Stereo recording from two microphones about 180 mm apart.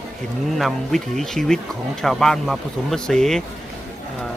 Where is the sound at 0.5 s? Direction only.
Centre (ahead or behind).